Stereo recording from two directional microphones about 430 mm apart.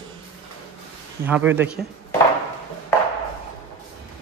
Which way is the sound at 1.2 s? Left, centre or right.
Centre.